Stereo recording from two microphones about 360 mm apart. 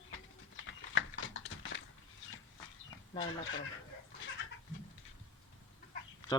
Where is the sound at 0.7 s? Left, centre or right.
Left.